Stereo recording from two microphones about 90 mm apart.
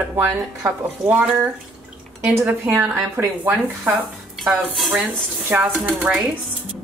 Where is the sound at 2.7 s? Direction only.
30° right (ahead or behind).